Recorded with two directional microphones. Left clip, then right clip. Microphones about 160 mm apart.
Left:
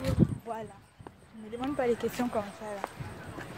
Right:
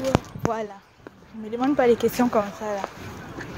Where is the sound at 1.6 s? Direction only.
50° right (ahead or behind).